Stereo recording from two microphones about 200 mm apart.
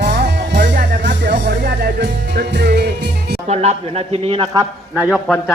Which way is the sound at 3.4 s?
30° right (ahead or behind).